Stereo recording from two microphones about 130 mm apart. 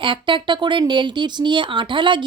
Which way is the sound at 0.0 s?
40° right (ahead or behind).